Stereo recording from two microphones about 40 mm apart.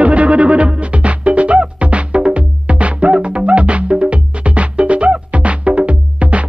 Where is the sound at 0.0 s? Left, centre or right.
Right.